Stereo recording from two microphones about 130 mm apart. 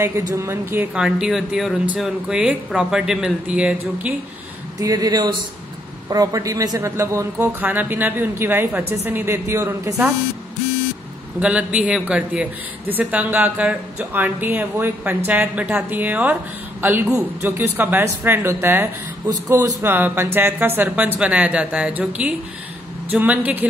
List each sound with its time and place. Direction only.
0.0 s speech: 25° right (ahead or behind)
0.9 s speech: 5° right (ahead or behind)
4.7 s a man's voice: 30° right (ahead or behind)
11.3 s a man's voice: 10° right (ahead or behind)